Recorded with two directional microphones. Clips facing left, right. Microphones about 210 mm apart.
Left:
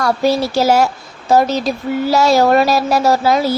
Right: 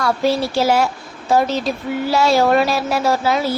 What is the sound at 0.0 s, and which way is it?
A woman's voice, 40° left (ahead or behind).